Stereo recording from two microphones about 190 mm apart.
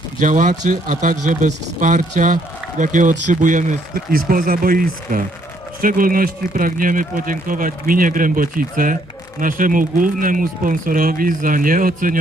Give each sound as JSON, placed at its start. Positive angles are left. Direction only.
{"t": 0.2, "sound": "speech", "side_deg": -40}